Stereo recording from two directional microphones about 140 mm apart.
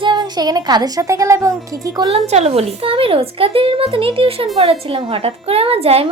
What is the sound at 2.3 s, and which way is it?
A woman's voice, 50° right (ahead or behind).